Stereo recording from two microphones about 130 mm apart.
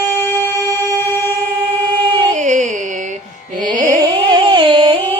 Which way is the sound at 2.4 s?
70° right (ahead or behind).